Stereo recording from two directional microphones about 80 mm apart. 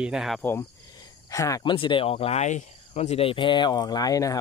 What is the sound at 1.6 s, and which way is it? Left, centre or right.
Speech, left.